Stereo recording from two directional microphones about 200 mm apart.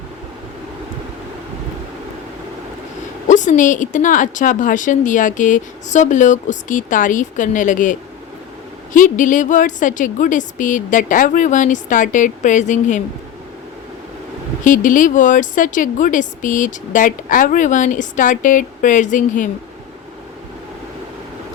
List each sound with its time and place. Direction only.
3.2 s speech: 40° left (ahead or behind)
14.6 s speech: 40° left (ahead or behind)